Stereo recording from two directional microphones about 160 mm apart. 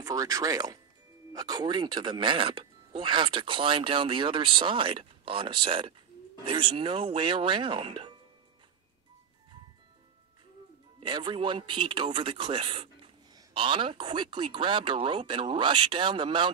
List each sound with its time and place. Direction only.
0.0 s a man's voice: 25° right (ahead or behind)
11.0 s a man's voice: 30° right (ahead or behind)